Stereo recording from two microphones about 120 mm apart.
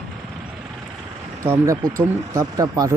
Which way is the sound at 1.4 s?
25° right (ahead or behind).